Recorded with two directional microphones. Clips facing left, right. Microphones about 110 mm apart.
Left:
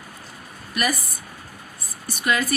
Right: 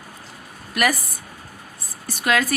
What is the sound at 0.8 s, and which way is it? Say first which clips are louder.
Speech: right 4 dB; 90° right.